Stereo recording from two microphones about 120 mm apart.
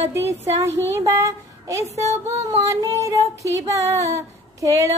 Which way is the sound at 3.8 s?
25° right (ahead or behind).